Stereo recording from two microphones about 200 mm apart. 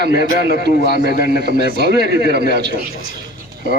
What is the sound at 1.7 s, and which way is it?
Speech, 55° right (ahead or behind).